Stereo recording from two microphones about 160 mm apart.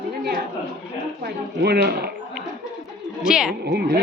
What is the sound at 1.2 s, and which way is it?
Speech, 90° right.